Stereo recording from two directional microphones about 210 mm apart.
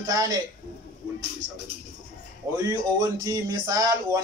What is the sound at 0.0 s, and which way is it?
Speech, 15° right (ahead or behind).